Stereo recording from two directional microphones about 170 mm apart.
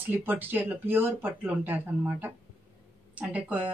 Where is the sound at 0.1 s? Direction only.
10° right (ahead or behind).